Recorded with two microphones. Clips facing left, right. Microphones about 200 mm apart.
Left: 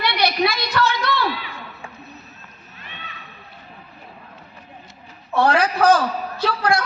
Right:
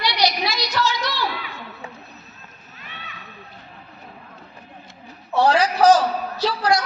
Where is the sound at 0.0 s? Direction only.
55° left (ahead or behind).